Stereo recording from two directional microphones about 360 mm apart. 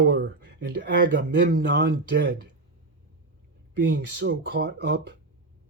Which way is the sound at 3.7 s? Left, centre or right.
Right.